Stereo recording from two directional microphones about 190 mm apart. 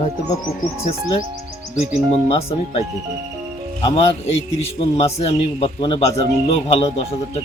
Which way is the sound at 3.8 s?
30° left (ahead or behind).